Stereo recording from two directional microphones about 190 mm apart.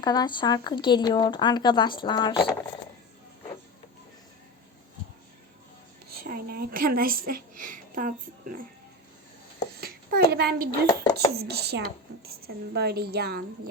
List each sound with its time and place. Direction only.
0.0 s speech: 20° left (ahead or behind)
6.1 s a woman's voice: 50° right (ahead or behind)
9.8 s a sound: 55° right (ahead or behind)
10.8 s speech: 15° left (ahead or behind)
11.3 s a woman's voice: 55° right (ahead or behind)